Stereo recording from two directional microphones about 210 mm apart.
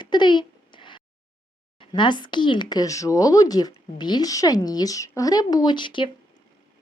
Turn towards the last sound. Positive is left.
turn(degrees=20)  # may be behind; listen again after turning